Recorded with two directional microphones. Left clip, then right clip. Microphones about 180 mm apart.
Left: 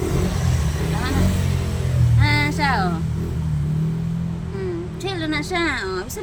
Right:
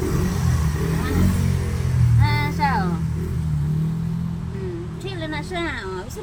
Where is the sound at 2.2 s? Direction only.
55° left (ahead or behind).